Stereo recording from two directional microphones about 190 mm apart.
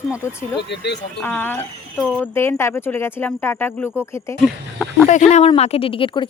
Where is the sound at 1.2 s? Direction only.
10° left (ahead or behind).